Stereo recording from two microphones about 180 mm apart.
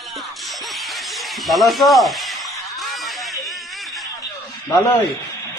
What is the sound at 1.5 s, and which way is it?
Speech, centre (ahead or behind).